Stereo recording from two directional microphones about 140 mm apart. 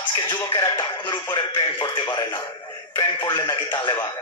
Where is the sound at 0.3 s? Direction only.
35° left (ahead or behind).